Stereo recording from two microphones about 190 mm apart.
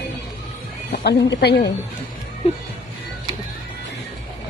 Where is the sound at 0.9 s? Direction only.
60° left (ahead or behind).